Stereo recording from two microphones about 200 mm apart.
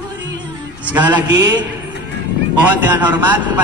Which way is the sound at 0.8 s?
10° right (ahead or behind).